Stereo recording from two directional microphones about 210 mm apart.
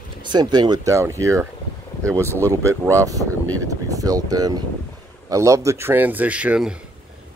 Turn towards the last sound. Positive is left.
turn(degrees=-5)  # may be behind; listen again after turning